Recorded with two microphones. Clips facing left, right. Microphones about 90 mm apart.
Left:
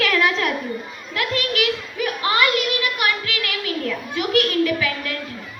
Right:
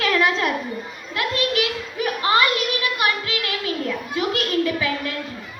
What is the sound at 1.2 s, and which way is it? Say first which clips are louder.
Children playing: even; 30° right (ahead or behind).